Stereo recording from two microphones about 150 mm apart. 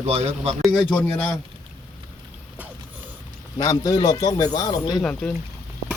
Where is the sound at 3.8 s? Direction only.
25° left (ahead or behind).